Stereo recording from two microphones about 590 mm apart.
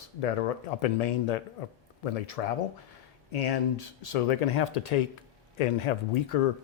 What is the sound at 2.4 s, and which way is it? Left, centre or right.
Speech, left.